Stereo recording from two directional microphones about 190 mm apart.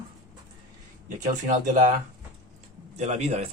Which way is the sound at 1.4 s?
40° right (ahead or behind).